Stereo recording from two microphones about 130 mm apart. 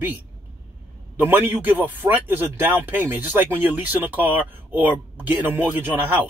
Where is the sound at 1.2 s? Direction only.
15° right (ahead or behind).